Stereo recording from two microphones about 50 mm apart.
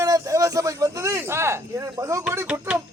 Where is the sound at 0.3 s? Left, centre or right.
Right.